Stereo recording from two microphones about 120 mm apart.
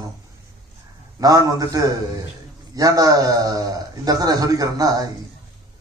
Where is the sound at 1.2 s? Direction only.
30° right (ahead or behind).